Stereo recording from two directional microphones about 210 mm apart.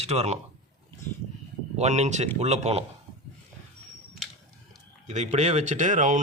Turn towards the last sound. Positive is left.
turn(degrees=-35)  # may be behind; listen again after turning